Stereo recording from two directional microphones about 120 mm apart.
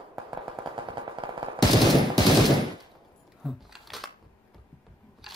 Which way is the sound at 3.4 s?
Centre (ahead or behind).